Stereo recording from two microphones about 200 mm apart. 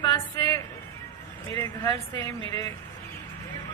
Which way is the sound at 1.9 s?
15° left (ahead or behind).